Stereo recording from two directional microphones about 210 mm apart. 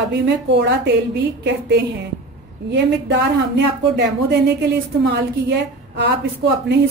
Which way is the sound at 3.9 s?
55° right (ahead or behind).